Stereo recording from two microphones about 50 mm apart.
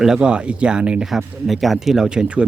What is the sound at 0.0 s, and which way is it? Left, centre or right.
Speech, centre.